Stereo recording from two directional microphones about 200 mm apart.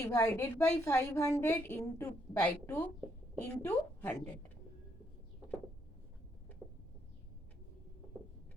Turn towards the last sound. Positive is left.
turn(degrees=-5)  # may be behind; listen again after turning